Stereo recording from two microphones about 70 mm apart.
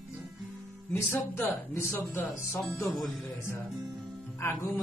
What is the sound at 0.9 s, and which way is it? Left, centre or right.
Speech, left.